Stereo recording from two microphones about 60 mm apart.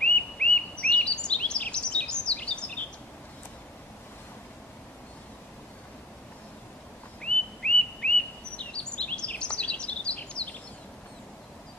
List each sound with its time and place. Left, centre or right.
0.0 s bird vocalization: centre
7.2 s whistling: centre
8.5 s bird vocalization: centre